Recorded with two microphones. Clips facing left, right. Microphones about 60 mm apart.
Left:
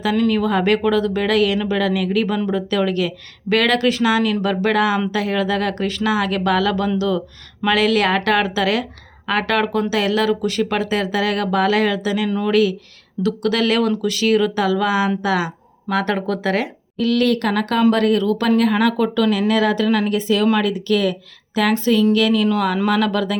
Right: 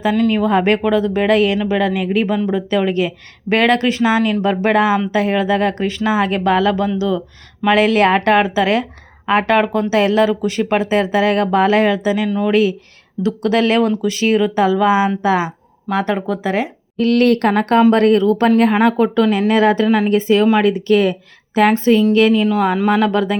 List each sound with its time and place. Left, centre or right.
0.0 s speech: right
0.4 s speech: right
17.0 s speech: right